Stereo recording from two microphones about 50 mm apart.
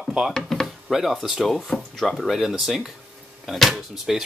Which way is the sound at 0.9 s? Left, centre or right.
Centre.